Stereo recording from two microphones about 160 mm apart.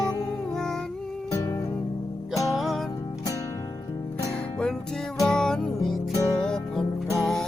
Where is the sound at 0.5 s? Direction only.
5° left (ahead or behind).